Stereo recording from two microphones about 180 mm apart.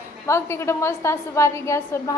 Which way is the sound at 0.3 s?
15° left (ahead or behind).